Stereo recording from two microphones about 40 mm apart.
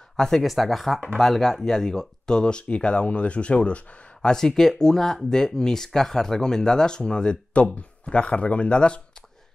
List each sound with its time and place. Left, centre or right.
0.4 s speech: centre; by 3.8 s left
4.2 s speech: centre